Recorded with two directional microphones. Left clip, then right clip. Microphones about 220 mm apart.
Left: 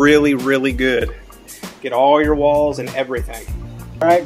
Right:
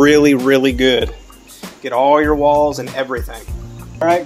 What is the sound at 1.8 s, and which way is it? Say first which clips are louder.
Speech: right 1 dB; 10° right (ahead or behind).